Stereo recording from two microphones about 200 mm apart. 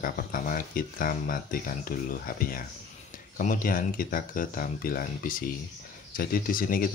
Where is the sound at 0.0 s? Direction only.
45° left (ahead or behind).